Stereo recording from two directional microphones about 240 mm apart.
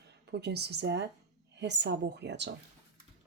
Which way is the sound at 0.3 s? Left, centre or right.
Right.